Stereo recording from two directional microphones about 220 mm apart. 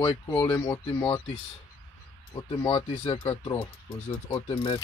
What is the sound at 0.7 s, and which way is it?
Speech, 20° left (ahead or behind).